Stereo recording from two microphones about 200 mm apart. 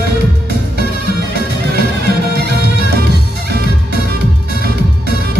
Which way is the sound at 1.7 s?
55° right (ahead or behind).